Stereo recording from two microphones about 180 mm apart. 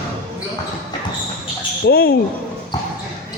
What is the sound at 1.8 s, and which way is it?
Speech, 60° left (ahead or behind).